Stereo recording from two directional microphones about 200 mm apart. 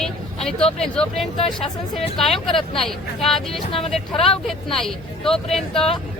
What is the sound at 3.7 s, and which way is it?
Speech, 30° left (ahead or behind).